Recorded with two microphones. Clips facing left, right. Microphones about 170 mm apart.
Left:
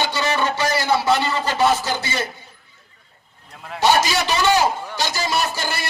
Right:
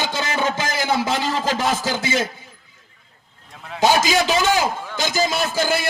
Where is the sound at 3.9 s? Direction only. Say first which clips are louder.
Even; 90° right.